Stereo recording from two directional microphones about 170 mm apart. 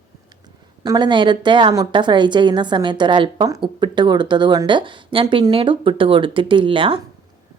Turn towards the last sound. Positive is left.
turn(degrees=-30)  # may be behind; listen again after turning